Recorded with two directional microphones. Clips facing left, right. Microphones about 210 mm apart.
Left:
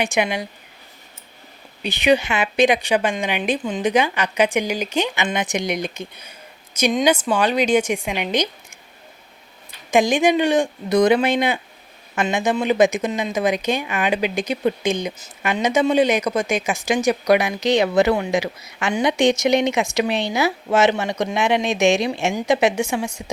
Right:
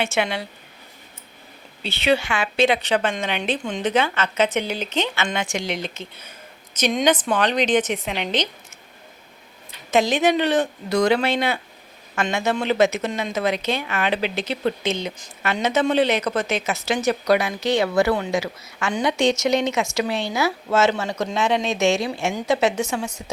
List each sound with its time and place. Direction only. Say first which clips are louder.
0.0 s speech: left 2 dB; 15° left (ahead or behind)
1.8 s speech: left 3 dB; 15° left (ahead or behind)
9.9 s speech: left 2 dB; 15° left (ahead or behind)